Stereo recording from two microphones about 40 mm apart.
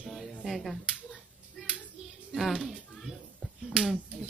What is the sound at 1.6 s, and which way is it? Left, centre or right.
Hands, centre.